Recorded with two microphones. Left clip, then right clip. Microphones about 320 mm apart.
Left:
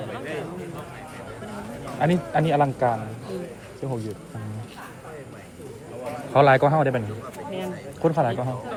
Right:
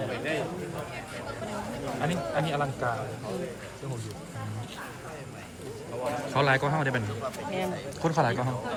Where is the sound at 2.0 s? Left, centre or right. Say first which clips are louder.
Left 8 dB; centre.